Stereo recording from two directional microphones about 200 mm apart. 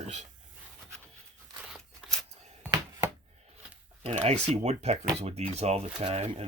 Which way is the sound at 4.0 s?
30° right (ahead or behind).